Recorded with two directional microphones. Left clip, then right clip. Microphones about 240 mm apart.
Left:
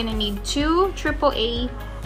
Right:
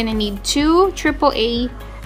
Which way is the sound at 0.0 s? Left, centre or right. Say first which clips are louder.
Right 4 dB; right.